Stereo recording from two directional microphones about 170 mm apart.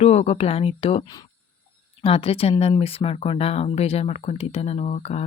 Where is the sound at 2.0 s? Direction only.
35° left (ahead or behind).